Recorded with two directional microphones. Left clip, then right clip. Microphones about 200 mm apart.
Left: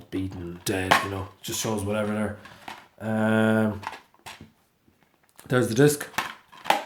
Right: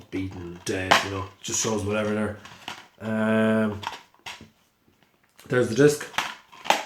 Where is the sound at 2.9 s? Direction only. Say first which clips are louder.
Even; 45° left (ahead or behind).